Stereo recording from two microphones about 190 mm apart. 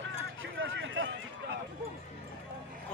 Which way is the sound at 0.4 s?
90° right.